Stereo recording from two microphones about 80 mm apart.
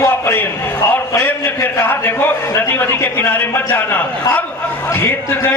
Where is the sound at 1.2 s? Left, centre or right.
Left.